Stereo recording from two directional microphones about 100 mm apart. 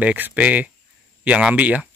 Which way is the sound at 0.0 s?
15° right (ahead or behind).